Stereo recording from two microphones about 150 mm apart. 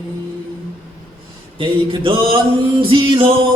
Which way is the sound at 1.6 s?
35° right (ahead or behind).